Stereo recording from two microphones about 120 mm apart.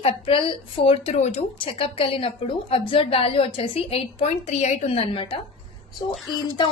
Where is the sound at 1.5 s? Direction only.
50° left (ahead or behind).